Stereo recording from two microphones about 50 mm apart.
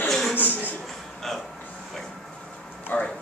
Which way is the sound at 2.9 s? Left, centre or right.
Left.